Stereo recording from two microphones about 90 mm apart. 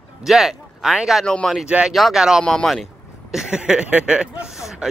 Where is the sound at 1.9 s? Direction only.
Centre (ahead or behind).